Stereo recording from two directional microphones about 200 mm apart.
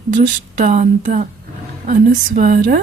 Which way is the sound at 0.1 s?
40° right (ahead or behind).